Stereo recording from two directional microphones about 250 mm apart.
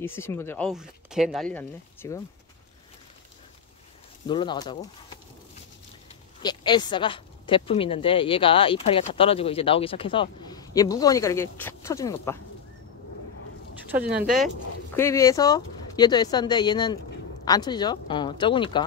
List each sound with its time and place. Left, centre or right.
0.0 s speech: centre
4.3 s speech: centre
6.4 s speech: centre
13.9 s speech: centre
15.0 s speech: centre